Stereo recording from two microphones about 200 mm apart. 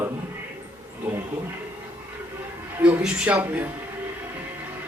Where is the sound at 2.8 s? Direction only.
5° right (ahead or behind).